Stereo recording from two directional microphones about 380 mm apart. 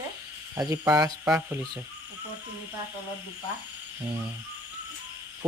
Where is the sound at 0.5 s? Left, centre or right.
Centre.